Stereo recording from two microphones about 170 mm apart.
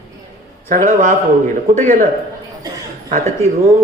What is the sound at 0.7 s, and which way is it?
Speech, 50° right (ahead or behind).